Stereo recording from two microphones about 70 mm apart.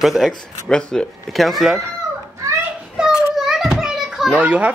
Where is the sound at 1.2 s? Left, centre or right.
Centre.